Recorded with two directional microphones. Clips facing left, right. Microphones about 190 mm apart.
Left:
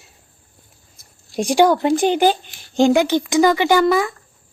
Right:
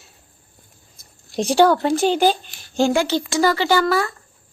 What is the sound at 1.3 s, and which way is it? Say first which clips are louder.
A woman's voice: left 1 dB; 15° left (ahead or behind).